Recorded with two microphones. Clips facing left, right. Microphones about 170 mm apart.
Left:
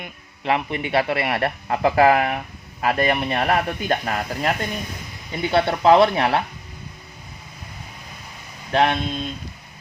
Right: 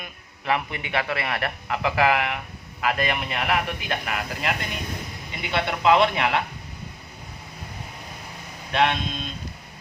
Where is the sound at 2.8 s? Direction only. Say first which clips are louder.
Left 5 dB; 35° left (ahead or behind).